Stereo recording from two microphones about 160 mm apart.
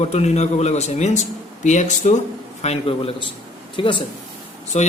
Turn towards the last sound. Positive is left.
turn(degrees=45)  # may be behind; listen again after turning